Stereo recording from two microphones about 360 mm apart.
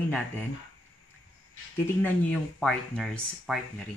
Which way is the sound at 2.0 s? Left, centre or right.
Centre.